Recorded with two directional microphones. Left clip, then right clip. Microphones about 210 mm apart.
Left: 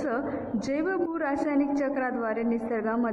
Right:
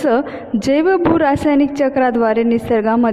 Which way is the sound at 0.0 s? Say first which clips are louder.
Right 13 dB; 45° right (ahead or behind).